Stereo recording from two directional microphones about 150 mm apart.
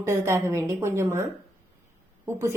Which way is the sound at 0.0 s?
20° right (ahead or behind).